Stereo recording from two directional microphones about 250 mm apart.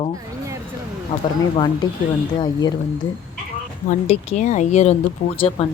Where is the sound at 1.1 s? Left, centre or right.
Left.